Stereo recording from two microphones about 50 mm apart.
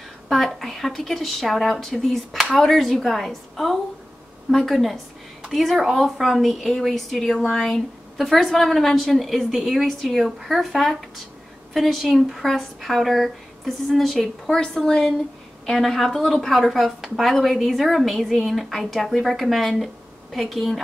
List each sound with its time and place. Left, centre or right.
0.3 s a woman's voice: centre